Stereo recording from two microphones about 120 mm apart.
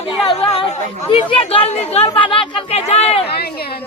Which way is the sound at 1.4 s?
55° left (ahead or behind).